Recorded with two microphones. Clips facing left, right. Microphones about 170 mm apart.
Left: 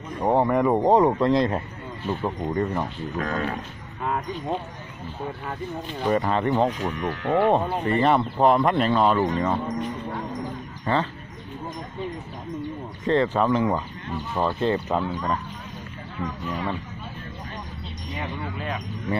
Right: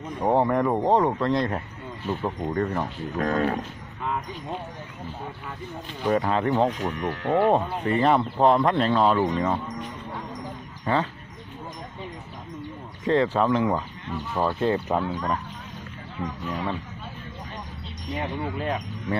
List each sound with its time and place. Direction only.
0.2 s speech: centre (ahead or behind); by 1.6 s 20° left (ahead or behind)
2.0 s speech: centre (ahead or behind)
3.2 s speech: 40° right (ahead or behind)
6.0 s speech: centre (ahead or behind)
10.9 s speech: 10° right (ahead or behind)
13.0 s speech: 5° right (ahead or behind)
16.4 s speech: centre (ahead or behind)